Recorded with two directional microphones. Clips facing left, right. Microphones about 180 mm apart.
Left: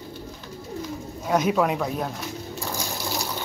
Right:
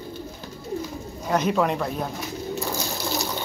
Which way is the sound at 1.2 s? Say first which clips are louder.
Left 1 dB; 5° left (ahead or behind).